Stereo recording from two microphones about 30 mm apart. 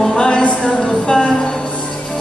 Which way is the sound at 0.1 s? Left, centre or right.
Left.